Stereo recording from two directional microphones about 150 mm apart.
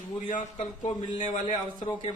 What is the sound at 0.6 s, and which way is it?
Speech, 35° left (ahead or behind).